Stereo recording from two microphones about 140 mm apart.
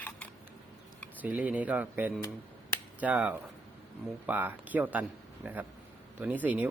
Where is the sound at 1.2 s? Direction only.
10° right (ahead or behind).